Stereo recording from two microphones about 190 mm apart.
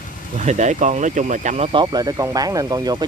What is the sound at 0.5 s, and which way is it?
Speech, 40° right (ahead or behind).